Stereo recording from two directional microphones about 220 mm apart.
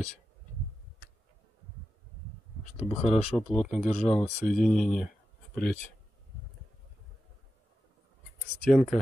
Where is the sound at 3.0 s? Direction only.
30° left (ahead or behind).